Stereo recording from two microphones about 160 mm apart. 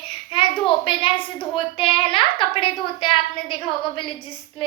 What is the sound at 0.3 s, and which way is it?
A woman's voice, 35° left (ahead or behind).